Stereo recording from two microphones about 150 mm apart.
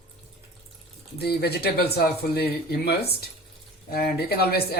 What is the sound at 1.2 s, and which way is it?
Speech, 90° left.